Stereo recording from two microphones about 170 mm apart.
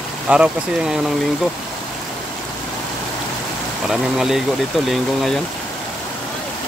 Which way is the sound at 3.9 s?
Centre (ahead or behind).